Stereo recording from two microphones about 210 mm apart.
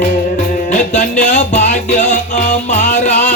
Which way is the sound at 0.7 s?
35° left (ahead or behind).